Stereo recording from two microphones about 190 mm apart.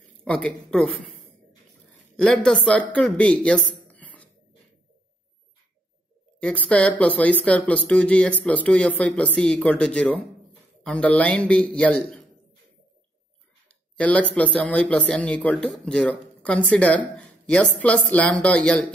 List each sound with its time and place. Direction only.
0.2 s speech: 5° left (ahead or behind)
6.4 s speech: 5° left (ahead or behind)
13.9 s speech: 5° left (ahead or behind)